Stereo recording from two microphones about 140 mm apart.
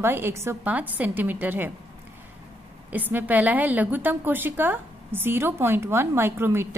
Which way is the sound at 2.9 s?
10° right (ahead or behind).